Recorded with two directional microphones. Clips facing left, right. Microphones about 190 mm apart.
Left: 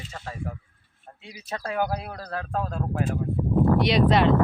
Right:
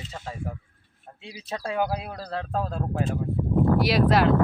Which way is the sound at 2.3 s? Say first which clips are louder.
Right 1 dB; 25° right (ahead or behind).